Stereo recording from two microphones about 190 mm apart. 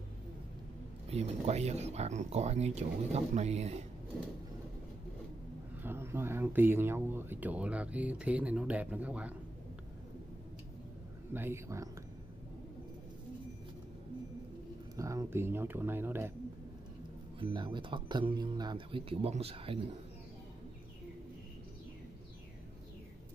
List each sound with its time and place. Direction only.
1.1 s speech: 35° right (ahead or behind)
5.8 s speech: 10° right (ahead or behind)
11.3 s speech: 15° right (ahead or behind)
15.0 s speech: 15° right (ahead or behind)
17.4 s speech: 25° right (ahead or behind)